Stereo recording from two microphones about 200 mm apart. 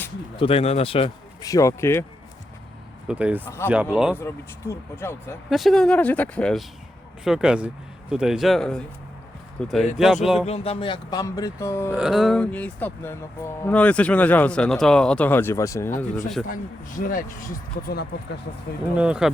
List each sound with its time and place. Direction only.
0.3 s speech: 30° left (ahead or behind)
1.5 s speech: 15° left (ahead or behind)
3.1 s speech: 5° right (ahead or behind)
4.1 s speech: 10° left (ahead or behind)
5.5 s speech: centre (ahead or behind)
10.4 s speech: 30° left (ahead or behind); by 11.9 s 15° left (ahead or behind)
11.9 s speech: 5° right (ahead or behind); by 15.9 s 15° left (ahead or behind)
16.5 s speech: 45° left (ahead or behind)
18.9 s speech: 5° right (ahead or behind)